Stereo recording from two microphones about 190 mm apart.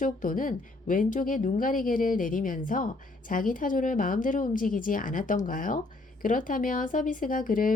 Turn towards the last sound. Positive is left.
turn(degrees=45)  # may be behind; listen again after turning